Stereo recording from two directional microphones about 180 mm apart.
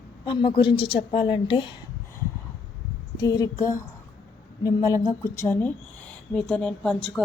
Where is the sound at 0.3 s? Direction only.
25° left (ahead or behind).